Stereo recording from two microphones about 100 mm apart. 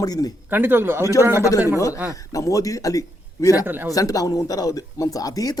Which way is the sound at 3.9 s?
35° left (ahead or behind).